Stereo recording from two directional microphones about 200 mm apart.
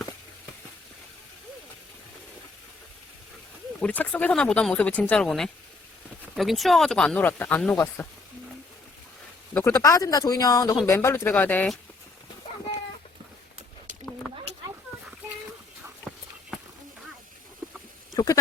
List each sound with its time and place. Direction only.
3.8 s speech: 5° left (ahead or behind)
9.6 s speech: 10° left (ahead or behind)
18.1 s goat: 20° left (ahead or behind)